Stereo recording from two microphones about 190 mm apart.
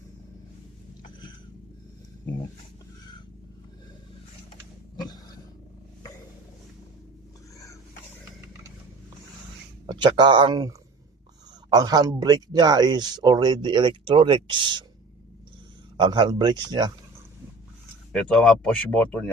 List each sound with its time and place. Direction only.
4.9 s dog: 20° left (ahead or behind)
9.9 s speech: 25° right (ahead or behind)
16.0 s speech: 25° right (ahead or behind)
18.1 s speech: 5° left (ahead or behind)